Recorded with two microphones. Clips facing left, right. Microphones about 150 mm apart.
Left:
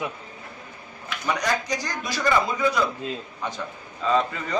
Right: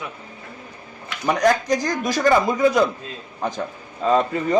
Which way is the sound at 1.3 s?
50° right (ahead or behind).